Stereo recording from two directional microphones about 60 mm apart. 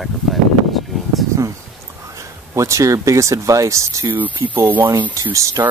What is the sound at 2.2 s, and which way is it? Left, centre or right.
Speech, right.